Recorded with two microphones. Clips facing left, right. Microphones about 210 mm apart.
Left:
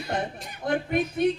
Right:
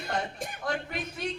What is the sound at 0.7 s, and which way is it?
Speech, 55° left (ahead or behind).